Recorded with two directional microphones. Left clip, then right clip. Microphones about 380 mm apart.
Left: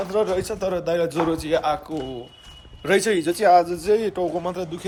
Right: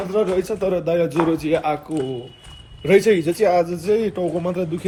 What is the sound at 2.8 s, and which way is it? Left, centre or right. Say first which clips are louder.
Speech: right 4 dB; centre.